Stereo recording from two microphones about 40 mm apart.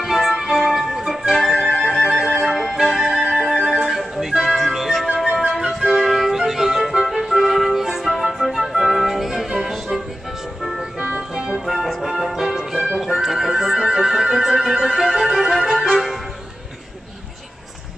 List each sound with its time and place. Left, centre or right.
0.0 s music: centre
1.6 s music: centre
1.9 s music: centre
5.0 s flute: centre
7.1 s music: centre
11.1 s music: centre
11.5 s music: centre
15.9 s music: centre